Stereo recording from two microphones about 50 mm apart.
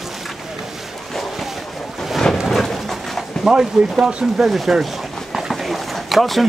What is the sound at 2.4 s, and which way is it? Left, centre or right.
Pigeon, centre.